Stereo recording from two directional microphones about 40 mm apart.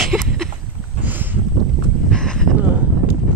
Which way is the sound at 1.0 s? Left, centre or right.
Right.